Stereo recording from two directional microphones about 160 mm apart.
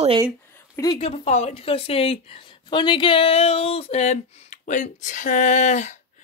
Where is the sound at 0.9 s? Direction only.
40° left (ahead or behind).